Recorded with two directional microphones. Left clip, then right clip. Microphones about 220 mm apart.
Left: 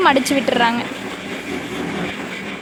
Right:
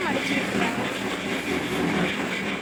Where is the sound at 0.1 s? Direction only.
Centre (ahead or behind).